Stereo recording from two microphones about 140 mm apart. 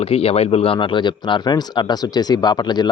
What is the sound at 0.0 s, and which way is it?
A man's voice, 45° left (ahead or behind).